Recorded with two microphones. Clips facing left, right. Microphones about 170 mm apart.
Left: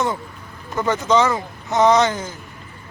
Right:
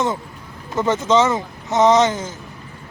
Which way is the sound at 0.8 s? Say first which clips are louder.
Right 1 dB; 25° right (ahead or behind).